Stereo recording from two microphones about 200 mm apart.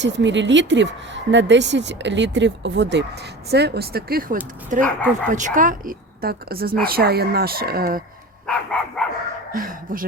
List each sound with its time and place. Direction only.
0.0 s speech: 65° right (ahead or behind); by 8.0 s 45° right (ahead or behind)
8.4 s dog: 5° left (ahead or behind)
9.5 s speech: 45° right (ahead or behind)